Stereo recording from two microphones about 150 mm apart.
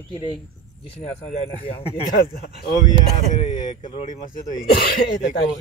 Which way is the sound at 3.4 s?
55° left (ahead or behind).